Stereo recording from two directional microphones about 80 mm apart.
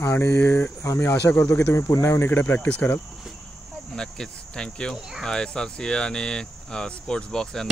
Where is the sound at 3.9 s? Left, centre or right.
Centre.